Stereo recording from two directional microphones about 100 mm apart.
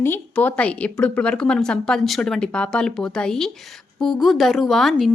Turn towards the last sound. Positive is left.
turn(degrees=0)  # may be behind; listen again after turning